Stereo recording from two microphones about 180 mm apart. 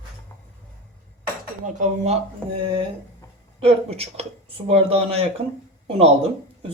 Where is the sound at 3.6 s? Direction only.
35° right (ahead or behind).